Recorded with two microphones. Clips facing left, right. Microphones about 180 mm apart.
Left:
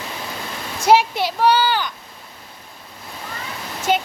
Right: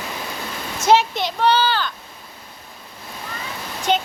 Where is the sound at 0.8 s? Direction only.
10° left (ahead or behind).